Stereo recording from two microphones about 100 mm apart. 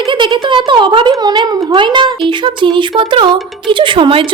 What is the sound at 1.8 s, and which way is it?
Speech, 50° right (ahead or behind).